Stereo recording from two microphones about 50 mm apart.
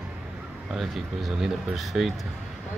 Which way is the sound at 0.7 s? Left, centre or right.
Centre.